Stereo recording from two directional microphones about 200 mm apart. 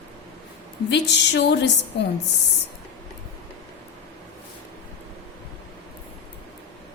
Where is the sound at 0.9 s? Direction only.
60° left (ahead or behind).